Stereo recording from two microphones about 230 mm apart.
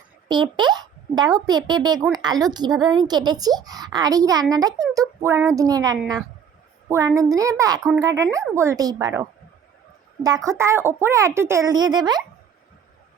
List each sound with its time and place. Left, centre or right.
0.3 s a child's voice: centre
10.2 s a woman's voice: centre